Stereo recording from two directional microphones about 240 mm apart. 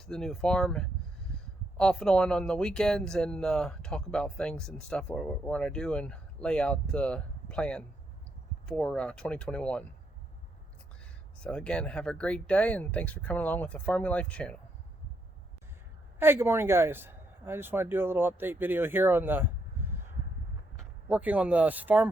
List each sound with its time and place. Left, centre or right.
0.0 s speech: centre
11.4 s speech: centre
16.2 s a man's voice: centre
21.1 s a man's voice: centre